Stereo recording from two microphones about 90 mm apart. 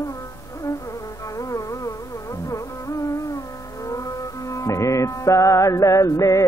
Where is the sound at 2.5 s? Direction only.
35° left (ahead or behind).